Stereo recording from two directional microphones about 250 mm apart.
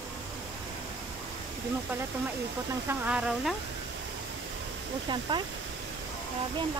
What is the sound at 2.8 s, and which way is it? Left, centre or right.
Speech, centre.